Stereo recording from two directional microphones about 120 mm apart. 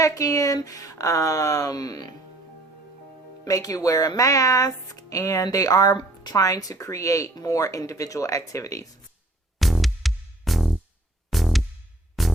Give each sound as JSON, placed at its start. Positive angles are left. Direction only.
{"t": 0.0, "sound": "speech", "side_deg": 30}
{"t": 3.4, "sound": "speech", "side_deg": 30}
{"t": 9.6, "sound": "music", "side_deg": 0}